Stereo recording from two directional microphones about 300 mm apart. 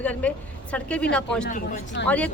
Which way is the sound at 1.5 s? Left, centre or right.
Left.